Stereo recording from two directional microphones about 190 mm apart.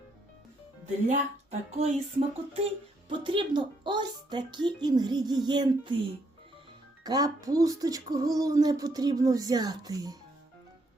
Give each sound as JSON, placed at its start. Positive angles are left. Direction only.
{"t": 1.0, "sound": "speech", "side_deg": -35}
{"t": 7.0, "sound": "speech", "side_deg": -20}